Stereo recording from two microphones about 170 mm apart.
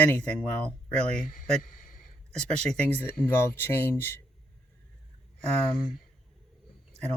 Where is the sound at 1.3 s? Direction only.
50° left (ahead or behind).